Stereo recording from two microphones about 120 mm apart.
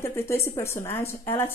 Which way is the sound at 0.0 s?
20° left (ahead or behind).